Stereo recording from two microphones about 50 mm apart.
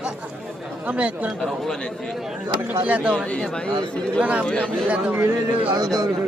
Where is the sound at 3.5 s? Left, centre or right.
Centre.